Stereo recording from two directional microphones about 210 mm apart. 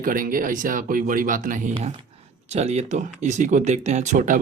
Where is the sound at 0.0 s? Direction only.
40° right (ahead or behind).